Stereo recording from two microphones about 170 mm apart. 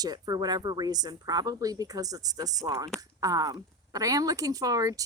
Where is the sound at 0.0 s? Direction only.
25° right (ahead or behind).